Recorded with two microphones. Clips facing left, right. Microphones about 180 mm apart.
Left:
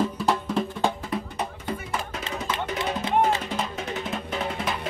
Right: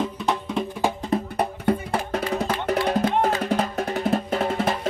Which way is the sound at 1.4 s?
60° right (ahead or behind).